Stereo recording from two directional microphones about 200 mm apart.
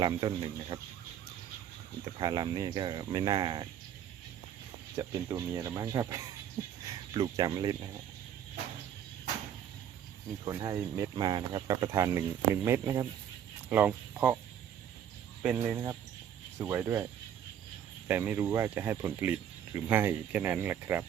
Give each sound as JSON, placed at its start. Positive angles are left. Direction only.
{"t": 0.0, "sound": "speech", "side_deg": -20}
{"t": 2.1, "sound": "speech", "side_deg": -20}
{"t": 4.9, "sound": "speech", "side_deg": -15}
{"t": 10.4, "sound": "speech", "side_deg": -20}
{"t": 15.4, "sound": "speech", "side_deg": -10}
{"t": 18.1, "sound": "speech", "side_deg": -10}